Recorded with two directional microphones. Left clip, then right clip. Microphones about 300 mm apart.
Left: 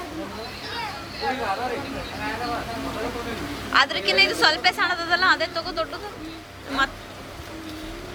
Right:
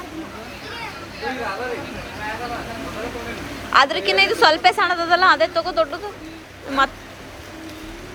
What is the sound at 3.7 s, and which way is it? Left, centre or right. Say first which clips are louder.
A woman's voice: right 4 dB; centre.